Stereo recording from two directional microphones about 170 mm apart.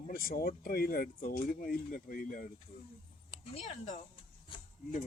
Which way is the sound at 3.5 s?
45° left (ahead or behind).